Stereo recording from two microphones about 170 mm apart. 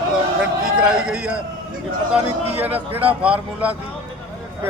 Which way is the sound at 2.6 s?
10° right (ahead or behind).